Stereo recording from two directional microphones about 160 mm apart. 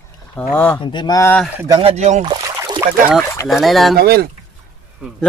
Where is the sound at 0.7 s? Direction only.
30° left (ahead or behind).